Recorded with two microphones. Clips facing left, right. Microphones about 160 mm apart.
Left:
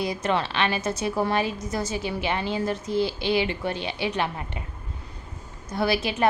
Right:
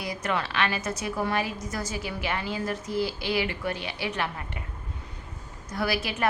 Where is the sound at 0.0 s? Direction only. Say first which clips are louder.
Left 5 dB; 25° left (ahead or behind).